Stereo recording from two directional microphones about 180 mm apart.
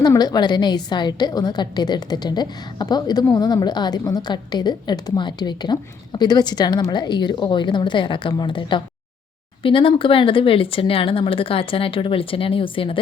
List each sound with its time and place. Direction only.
0.0 s a woman's voice: 20° left (ahead or behind)